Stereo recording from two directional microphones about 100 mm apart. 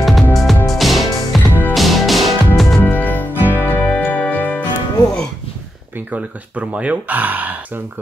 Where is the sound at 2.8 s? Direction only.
20° left (ahead or behind).